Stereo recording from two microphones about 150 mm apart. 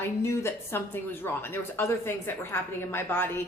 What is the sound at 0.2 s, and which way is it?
A woman's voice, 15° left (ahead or behind).